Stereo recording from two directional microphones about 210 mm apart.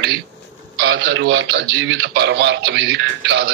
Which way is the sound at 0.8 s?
60° right (ahead or behind).